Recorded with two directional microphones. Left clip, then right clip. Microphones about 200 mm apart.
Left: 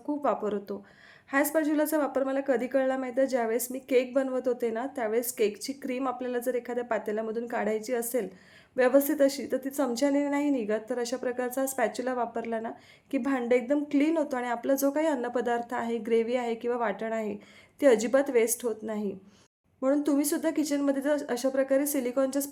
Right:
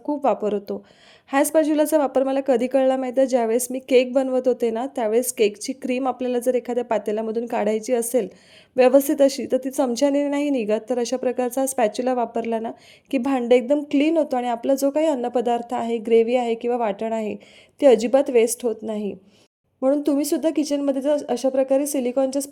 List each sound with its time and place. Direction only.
0.1 s a woman's voice: 35° right (ahead or behind)